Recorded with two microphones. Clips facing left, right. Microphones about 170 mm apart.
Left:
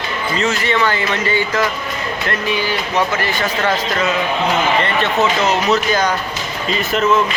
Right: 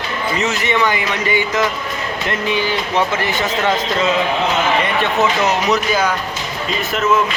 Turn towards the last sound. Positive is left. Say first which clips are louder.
# left 1 dB
turn(degrees=-10)  # may be behind; listen again after turning